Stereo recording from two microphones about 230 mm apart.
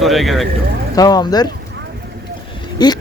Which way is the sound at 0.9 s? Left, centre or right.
Centre.